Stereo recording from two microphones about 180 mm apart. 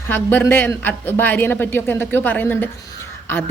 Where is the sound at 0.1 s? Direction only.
10° left (ahead or behind).